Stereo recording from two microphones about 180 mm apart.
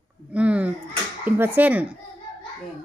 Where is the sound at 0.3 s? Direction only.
10° right (ahead or behind).